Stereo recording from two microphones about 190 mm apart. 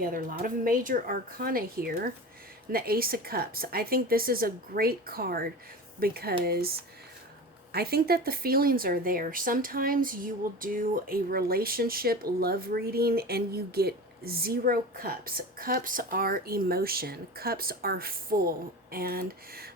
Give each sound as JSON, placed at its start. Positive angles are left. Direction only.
{"t": 0.0, "sound": "speech", "side_deg": -45}